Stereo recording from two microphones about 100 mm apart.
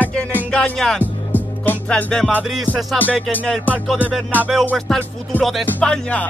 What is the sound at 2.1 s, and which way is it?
Music, 5° left (ahead or behind).